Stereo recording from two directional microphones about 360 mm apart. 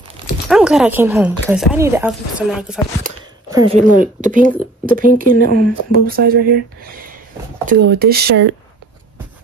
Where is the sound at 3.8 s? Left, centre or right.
Right.